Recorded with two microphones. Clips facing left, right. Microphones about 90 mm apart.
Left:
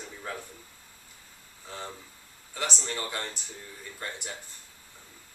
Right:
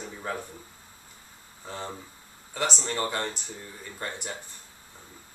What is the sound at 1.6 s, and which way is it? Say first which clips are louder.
Speech: right 4 dB; 35° right (ahead or behind).